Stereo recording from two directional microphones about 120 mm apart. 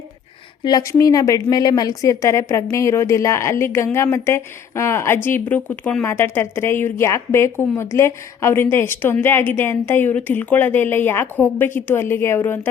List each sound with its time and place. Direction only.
0.6 s a woman's voice: 30° left (ahead or behind)